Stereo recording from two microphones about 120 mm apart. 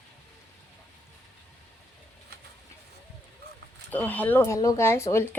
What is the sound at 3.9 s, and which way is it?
A woman's voice, 15° left (ahead or behind).